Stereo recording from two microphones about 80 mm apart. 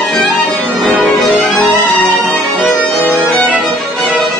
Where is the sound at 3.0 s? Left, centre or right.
Centre.